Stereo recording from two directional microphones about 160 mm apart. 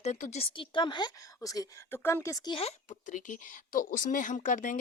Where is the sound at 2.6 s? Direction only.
45° left (ahead or behind).